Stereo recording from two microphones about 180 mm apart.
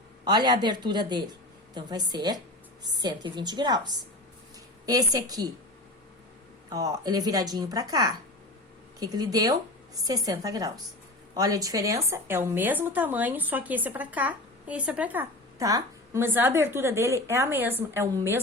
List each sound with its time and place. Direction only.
0.3 s a woman's voice: 25° right (ahead or behind)
6.7 s a woman's voice: 20° right (ahead or behind)